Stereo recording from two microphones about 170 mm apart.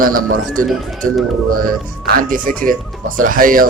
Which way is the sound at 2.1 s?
55° right (ahead or behind).